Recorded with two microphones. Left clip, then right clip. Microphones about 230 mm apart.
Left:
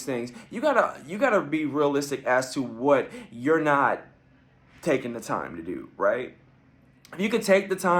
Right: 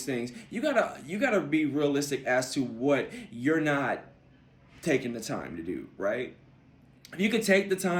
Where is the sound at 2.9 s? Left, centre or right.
Centre.